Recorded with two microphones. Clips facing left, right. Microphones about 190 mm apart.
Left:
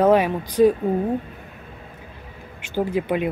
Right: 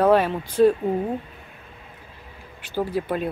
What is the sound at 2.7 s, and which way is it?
Speech, 15° left (ahead or behind).